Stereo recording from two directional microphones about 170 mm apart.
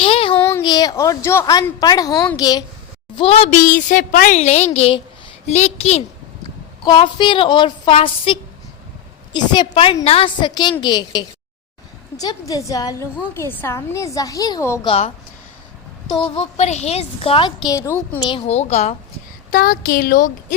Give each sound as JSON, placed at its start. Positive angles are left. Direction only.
{"t": 0.0, "sound": "a sound", "side_deg": 35}
{"t": 0.3, "sound": "a sound", "side_deg": 15}
{"t": 0.6, "sound": "a woman's voice", "side_deg": 25}
{"t": 3.2, "sound": "a woman's voice", "side_deg": 35}
{"t": 4.4, "sound": "speech", "side_deg": 40}
{"t": 6.8, "sound": "a woman's voice", "side_deg": 25}
{"t": 14.8, "sound": "speech", "side_deg": 35}
{"t": 16.2, "sound": "speech", "side_deg": 35}
{"t": 17.7, "sound": "a woman's voice", "side_deg": 15}
{"t": 18.2, "sound": "speech", "side_deg": 30}
{"t": 19.5, "sound": "a woman's voice", "side_deg": 55}